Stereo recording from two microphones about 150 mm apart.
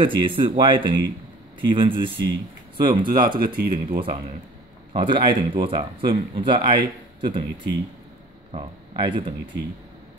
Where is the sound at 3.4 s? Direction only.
75° right (ahead or behind).